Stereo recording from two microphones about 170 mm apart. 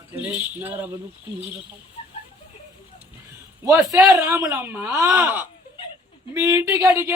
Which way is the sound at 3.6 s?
15° right (ahead or behind).